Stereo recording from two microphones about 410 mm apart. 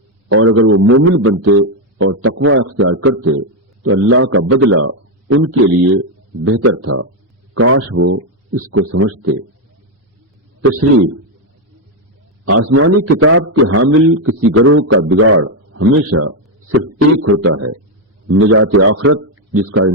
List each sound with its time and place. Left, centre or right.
0.3 s a man's voice: right
10.6 s a man's voice: right
12.5 s a man's voice: right